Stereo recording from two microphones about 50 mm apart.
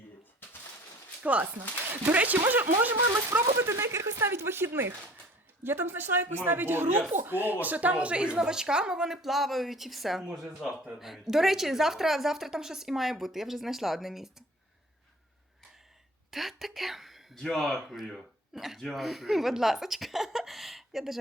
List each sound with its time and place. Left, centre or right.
1.2 s speech: right
3.6 s speech: right
4.3 s a woman's voice: right; by 14.4 s centre
16.3 s a woman's voice: centre
17.3 s speech: centre
17.7 s a woman's voice: centre